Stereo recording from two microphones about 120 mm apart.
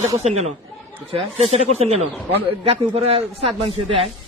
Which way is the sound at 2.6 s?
50° right (ahead or behind).